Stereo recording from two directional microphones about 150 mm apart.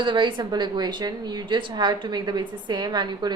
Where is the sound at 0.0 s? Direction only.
30° right (ahead or behind).